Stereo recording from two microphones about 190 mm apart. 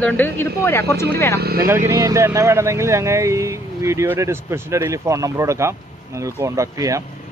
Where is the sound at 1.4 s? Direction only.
55° right (ahead or behind).